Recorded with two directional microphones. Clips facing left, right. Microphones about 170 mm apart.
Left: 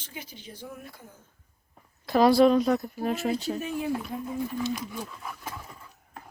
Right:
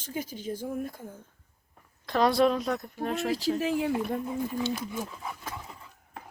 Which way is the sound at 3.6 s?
85° right.